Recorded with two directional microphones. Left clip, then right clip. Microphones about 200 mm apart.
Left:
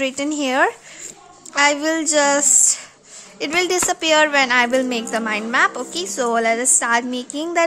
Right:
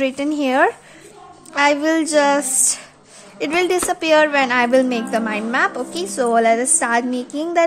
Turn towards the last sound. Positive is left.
turn(degrees=10)  # may be behind; listen again after turning